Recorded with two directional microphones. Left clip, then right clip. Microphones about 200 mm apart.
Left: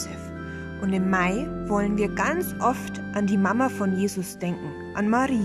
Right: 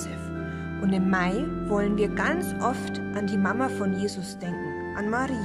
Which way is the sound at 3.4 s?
10° left (ahead or behind).